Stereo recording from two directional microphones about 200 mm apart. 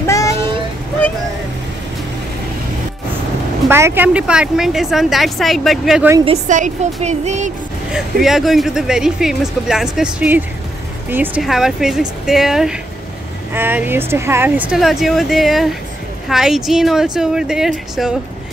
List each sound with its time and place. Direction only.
0.0 s vehicle: 15° left (ahead or behind)
3.6 s speech: 10° right (ahead or behind)
6.2 s a woman's voice: 40° right (ahead or behind)
7.9 s speech: centre (ahead or behind)